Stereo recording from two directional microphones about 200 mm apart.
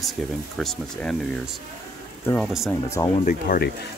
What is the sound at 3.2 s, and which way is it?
Speech, 45° left (ahead or behind).